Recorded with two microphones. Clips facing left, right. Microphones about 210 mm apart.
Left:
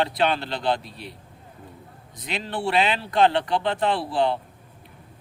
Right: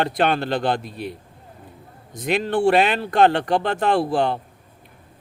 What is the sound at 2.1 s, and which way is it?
Speech, 50° right (ahead or behind).